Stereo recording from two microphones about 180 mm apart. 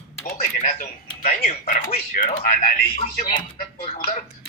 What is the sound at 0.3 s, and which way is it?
Speech, 45° left (ahead or behind).